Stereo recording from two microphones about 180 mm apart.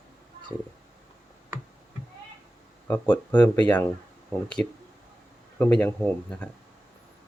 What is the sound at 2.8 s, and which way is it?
Speech, 10° left (ahead or behind).